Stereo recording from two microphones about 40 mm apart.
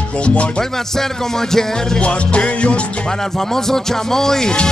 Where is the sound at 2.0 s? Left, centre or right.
Left.